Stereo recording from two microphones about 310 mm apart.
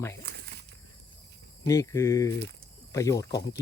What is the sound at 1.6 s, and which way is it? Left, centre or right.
Speech, centre.